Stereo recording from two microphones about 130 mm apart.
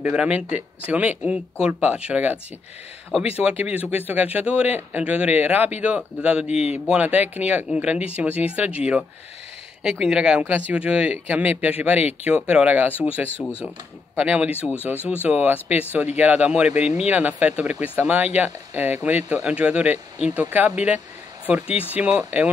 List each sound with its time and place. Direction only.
0.0 s speech: 10° right (ahead or behind)
3.4 s speech: 10° right (ahead or behind)
6.4 s a man's voice: 50° left (ahead or behind)
6.7 s speech: 10° right (ahead or behind)
14.6 s speech: 15° left (ahead or behind)
15.2 s speech: 10° right (ahead or behind)